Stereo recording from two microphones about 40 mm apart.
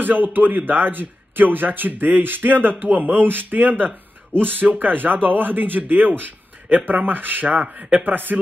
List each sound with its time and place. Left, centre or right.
0.0 s speech: right